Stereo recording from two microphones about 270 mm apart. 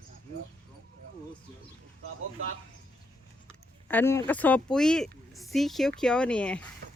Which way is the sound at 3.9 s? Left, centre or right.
Centre.